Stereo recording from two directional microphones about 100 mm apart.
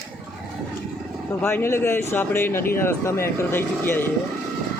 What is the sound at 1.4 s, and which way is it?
Speech, 25° left (ahead or behind).